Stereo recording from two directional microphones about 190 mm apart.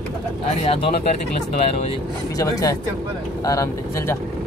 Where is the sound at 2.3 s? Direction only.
20° left (ahead or behind).